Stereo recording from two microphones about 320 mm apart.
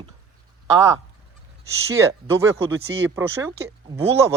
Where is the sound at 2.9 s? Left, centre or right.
Right.